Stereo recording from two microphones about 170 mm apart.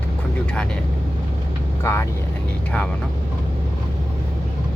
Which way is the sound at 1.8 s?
15° left (ahead or behind).